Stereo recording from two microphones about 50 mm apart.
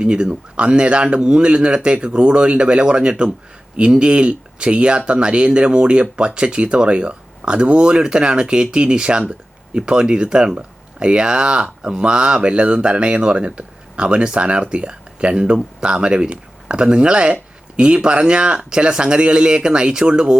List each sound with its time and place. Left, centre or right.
0.0 s speech: centre